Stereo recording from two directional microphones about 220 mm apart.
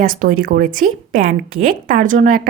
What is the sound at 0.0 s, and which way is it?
Speech, 40° right (ahead or behind).